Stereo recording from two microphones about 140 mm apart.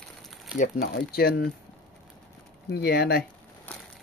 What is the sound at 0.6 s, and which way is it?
Speech, 80° left.